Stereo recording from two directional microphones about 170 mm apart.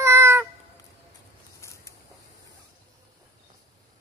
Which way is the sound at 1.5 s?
15° left (ahead or behind).